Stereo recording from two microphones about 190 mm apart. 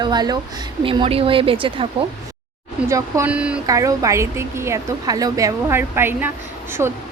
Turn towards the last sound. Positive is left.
turn(degrees=-15)  # may be behind; listen again after turning